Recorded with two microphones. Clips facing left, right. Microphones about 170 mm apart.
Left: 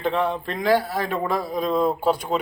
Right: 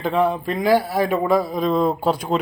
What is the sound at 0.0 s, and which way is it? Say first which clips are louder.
Speech: right 3 dB; 5° right (ahead or behind).